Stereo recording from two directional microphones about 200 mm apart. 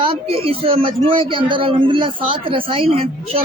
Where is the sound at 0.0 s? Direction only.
25° right (ahead or behind).